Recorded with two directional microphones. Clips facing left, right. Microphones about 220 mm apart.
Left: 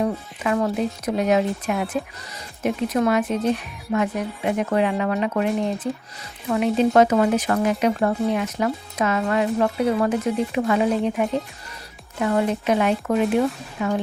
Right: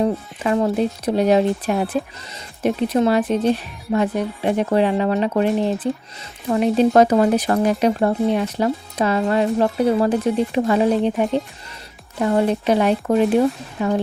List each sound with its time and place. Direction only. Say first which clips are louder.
0.0 s speech: right 3 dB; 30° right (ahead or behind)